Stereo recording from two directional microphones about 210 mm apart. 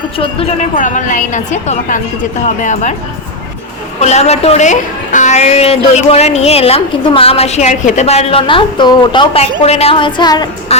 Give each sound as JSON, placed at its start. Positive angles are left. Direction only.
{"t": 0.2, "sound": "a woman's voice", "side_deg": 25}
{"t": 0.8, "sound": "a woman's voice", "side_deg": 35}
{"t": 4.0, "sound": "a woman's voice", "side_deg": 30}